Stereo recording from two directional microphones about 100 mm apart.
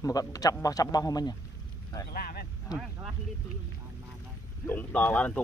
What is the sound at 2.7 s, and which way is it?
Speech, 40° left (ahead or behind).